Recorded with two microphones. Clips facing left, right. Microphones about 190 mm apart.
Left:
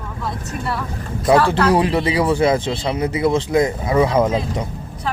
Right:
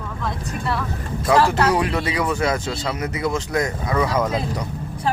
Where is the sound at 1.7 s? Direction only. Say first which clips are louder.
Left 4 dB; 30° left (ahead or behind).